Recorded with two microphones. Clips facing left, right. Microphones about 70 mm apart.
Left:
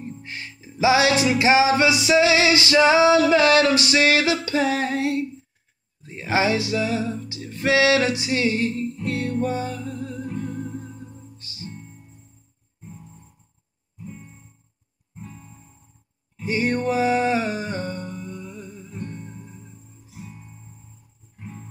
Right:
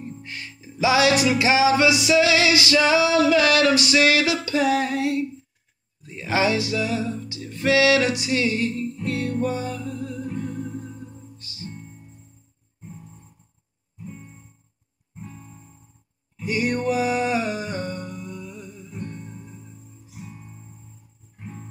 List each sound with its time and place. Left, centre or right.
0.0 s music: left
16.3 s music: left